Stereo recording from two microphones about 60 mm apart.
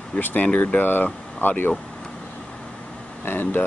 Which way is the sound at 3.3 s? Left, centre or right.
Left.